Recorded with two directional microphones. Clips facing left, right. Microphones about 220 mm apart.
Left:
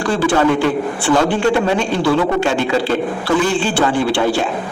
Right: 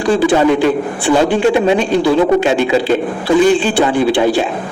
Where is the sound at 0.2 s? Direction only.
15° right (ahead or behind).